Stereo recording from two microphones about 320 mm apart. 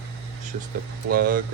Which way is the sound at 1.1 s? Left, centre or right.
Right.